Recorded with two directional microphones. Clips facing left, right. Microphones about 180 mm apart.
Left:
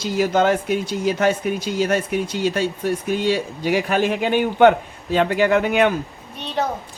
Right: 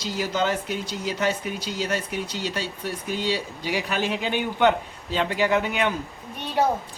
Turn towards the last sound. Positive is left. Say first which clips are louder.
# right 1 dB
turn(degrees=-10)  # may be behind; listen again after turning